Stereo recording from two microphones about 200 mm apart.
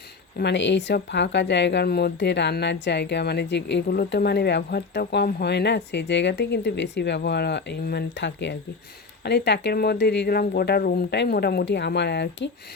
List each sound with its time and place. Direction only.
0.3 s speech: 60° left (ahead or behind)